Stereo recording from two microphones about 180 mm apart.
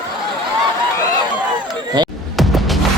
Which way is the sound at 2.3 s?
Centre (ahead or behind).